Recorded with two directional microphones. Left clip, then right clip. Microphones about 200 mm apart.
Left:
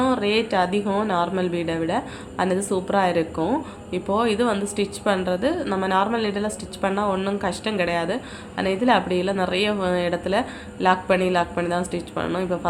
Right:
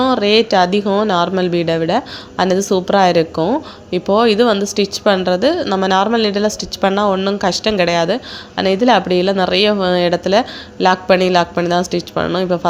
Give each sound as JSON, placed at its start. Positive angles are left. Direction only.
{"t": 0.0, "sound": "speech", "side_deg": -35}